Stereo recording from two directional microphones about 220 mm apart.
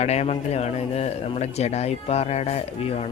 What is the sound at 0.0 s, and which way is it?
Speech, 30° left (ahead or behind).